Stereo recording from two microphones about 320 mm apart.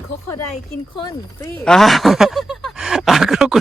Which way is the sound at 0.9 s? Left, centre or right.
Centre.